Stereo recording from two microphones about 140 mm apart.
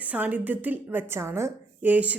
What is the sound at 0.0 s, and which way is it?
A woman's voice, 10° right (ahead or behind).